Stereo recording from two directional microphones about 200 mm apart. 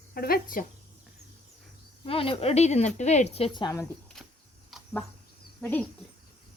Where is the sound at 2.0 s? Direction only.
30° left (ahead or behind).